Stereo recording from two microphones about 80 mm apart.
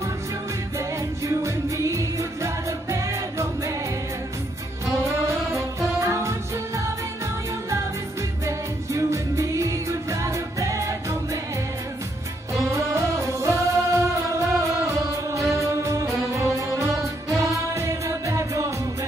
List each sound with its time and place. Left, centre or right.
0.7 s music: right
5.6 s music: right
8.5 s music: right
12.7 s music: right